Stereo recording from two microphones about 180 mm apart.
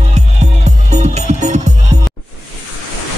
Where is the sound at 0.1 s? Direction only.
40° right (ahead or behind).